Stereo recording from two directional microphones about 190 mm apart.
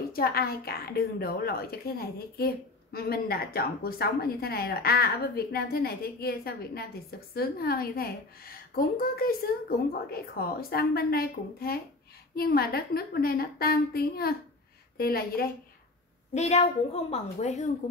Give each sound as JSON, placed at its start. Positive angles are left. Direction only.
{"t": 0.1, "sound": "a woman's voice", "side_deg": 55}
{"t": 16.3, "sound": "a woman's voice", "side_deg": 35}